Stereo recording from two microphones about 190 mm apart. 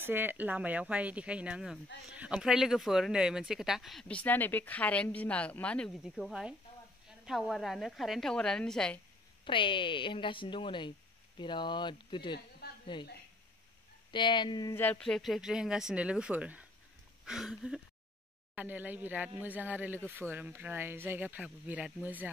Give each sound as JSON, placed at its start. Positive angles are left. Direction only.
{"t": 0.0, "sound": "speech", "side_deg": -10}
{"t": 9.4, "sound": "speech", "side_deg": 25}
{"t": 12.6, "sound": "a sound", "side_deg": 55}
{"t": 14.1, "sound": "speech", "side_deg": 25}
{"t": 14.8, "sound": "speech", "side_deg": 5}